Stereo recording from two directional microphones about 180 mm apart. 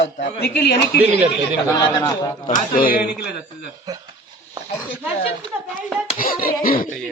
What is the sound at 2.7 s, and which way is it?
Speech, 50° left (ahead or behind).